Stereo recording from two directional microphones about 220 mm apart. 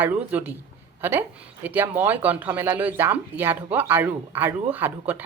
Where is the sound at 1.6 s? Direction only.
10° right (ahead or behind).